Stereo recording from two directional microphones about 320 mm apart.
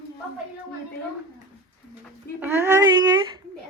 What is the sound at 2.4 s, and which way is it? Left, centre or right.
Speech, centre.